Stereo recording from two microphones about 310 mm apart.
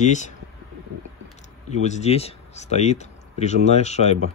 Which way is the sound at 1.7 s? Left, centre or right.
Left.